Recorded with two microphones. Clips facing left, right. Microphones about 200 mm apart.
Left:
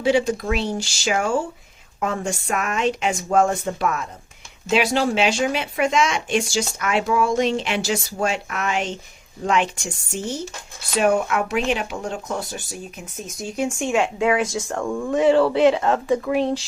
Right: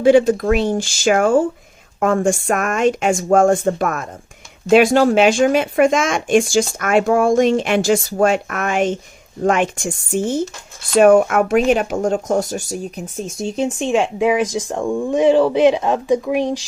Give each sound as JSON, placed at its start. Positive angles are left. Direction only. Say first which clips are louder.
{"t": 0.0, "sound": "speech", "louder": "right 8 dB", "side_deg": -50}